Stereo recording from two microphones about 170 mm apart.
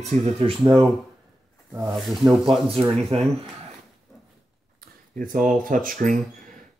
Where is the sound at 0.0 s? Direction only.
40° right (ahead or behind).